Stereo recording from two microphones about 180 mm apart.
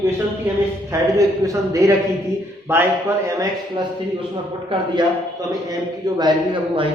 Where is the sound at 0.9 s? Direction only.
20° right (ahead or behind).